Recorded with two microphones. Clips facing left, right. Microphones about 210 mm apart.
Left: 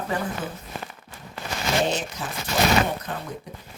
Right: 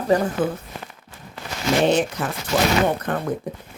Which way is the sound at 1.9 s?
60° right (ahead or behind).